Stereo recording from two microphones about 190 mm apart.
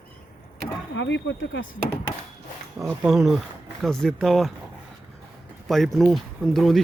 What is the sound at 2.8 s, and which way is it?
Speech, centre (ahead or behind).